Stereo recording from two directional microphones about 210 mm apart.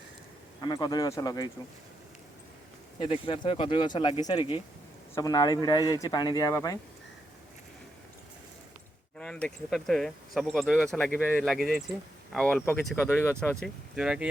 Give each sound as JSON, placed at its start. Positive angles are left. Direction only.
{"t": 0.6, "sound": "speech", "side_deg": 20}
{"t": 3.0, "sound": "speech", "side_deg": 25}
{"t": 9.1, "sound": "speech", "side_deg": 5}